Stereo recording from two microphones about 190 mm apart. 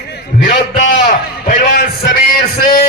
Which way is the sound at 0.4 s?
45° left (ahead or behind).